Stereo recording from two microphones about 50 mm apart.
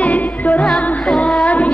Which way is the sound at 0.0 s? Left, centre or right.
Left.